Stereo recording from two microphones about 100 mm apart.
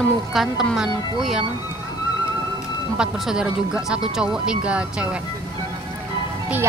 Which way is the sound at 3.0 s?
10° right (ahead or behind).